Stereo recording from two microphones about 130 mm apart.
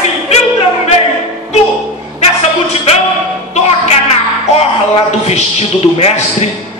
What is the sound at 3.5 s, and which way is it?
A man's voice, 55° left (ahead or behind).